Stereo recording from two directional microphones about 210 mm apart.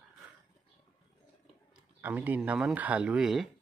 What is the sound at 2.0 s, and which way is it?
Speech, 10° right (ahead or behind).